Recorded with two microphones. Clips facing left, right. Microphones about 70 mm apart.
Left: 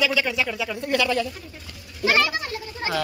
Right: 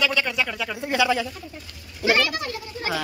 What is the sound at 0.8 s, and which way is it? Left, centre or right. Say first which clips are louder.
Speech: right 1 dB; centre.